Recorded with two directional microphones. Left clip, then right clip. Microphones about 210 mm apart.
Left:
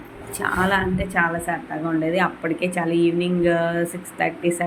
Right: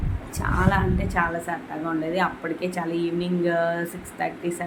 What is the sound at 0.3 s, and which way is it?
Speech, 10° left (ahead or behind).